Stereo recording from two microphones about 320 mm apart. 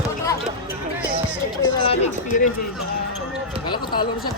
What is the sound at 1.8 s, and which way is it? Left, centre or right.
Speech, centre.